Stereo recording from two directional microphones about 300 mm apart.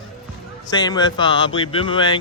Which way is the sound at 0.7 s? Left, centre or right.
Centre.